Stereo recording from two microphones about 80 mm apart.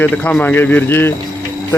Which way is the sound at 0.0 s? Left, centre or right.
Left.